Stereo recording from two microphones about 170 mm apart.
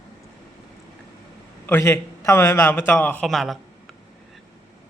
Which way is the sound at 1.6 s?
15° left (ahead or behind).